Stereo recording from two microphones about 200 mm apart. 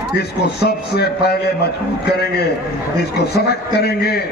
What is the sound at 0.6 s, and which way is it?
A man's voice, 55° left (ahead or behind).